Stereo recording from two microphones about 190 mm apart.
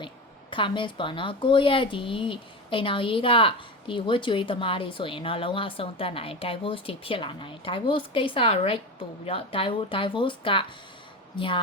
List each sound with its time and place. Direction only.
0.5 s a woman's voice: 25° left (ahead or behind)